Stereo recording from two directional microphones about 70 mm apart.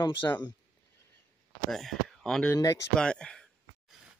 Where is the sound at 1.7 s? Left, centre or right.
Centre.